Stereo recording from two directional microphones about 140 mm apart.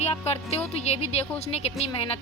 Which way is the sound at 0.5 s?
50° left (ahead or behind).